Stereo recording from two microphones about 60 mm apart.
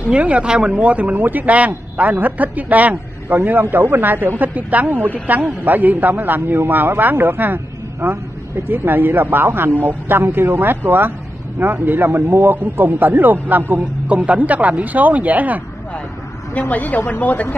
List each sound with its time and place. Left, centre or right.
0.1 s a man's voice: centre
3.7 s a man's voice: right
16.5 s a woman's voice: left